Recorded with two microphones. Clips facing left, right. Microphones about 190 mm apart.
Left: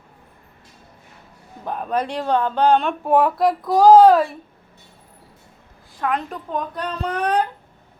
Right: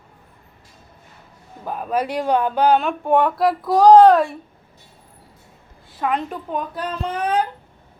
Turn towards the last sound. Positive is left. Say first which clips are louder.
# left 1 dB
turn(degrees=-5)  # may be behind; listen again after turning